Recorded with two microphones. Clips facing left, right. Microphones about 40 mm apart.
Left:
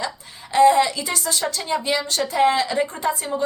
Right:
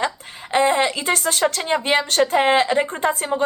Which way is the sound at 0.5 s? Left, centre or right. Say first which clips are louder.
Left 3 dB; right.